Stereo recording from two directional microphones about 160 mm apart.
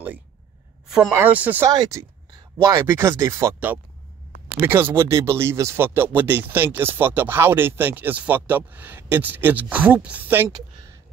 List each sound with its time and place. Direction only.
0.8 s a sound: 5° right (ahead or behind)
1.1 s speech: 10° right (ahead or behind)
1.7 s speech: 20° right (ahead or behind)